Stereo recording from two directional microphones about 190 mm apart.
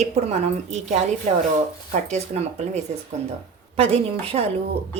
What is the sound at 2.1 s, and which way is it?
Speech, 35° right (ahead or behind).